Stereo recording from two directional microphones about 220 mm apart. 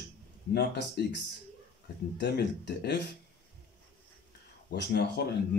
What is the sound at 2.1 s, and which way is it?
Speech, 50° left (ahead or behind).